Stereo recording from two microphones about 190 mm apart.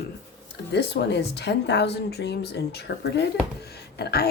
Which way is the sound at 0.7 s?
60° left (ahead or behind).